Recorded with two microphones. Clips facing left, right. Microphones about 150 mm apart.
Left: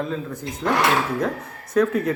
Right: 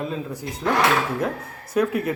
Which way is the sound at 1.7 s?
10° right (ahead or behind).